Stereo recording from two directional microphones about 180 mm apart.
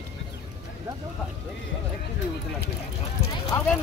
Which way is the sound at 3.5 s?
20° left (ahead or behind).